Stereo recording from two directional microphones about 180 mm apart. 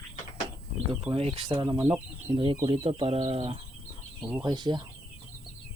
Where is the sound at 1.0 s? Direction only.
30° right (ahead or behind).